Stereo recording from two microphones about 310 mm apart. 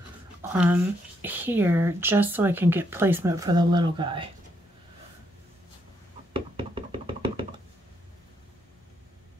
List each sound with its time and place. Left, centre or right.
0.4 s speech: centre
6.3 s knock: centre